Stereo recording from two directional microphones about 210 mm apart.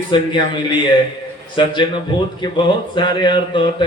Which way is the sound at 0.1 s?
20° left (ahead or behind).